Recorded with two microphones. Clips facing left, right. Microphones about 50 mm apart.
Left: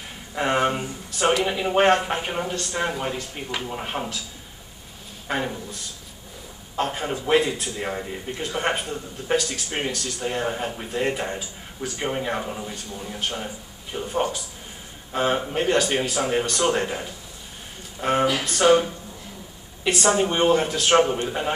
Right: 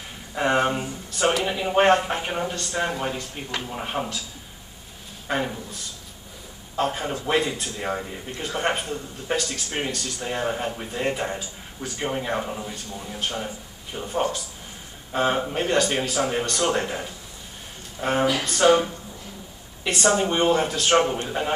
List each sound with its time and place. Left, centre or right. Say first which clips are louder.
0.3 s speech: even; centre
5.3 s speech: even; centre
6.8 s speech: even; centre
19.8 s speech: left 1 dB; centre